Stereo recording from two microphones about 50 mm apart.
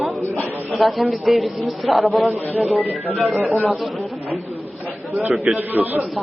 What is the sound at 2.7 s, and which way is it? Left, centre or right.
Speech, left.